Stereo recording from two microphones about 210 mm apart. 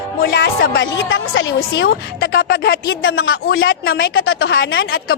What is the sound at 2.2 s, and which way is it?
Speech, 50° left (ahead or behind).